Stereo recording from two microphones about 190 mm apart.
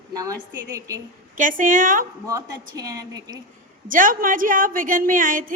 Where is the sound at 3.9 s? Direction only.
45° right (ahead or behind).